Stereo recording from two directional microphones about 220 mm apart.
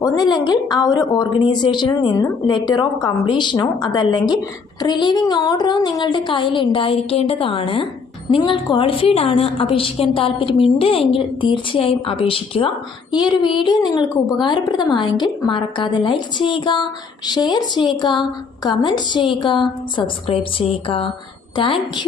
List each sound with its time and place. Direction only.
0.0 s a woman's voice: 15° left (ahead or behind)